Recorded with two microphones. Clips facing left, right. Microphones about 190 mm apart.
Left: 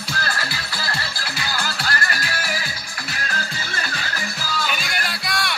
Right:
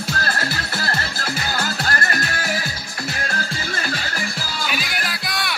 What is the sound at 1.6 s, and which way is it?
Music, 45° right (ahead or behind).